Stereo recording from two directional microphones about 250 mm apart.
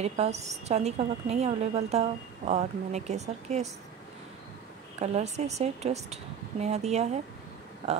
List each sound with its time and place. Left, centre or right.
0.0 s a woman's voice: right
5.0 s a woman's voice: right